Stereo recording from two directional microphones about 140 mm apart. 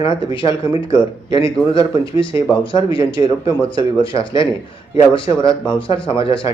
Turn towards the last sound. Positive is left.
turn(degrees=40)  # may be behind; listen again after turning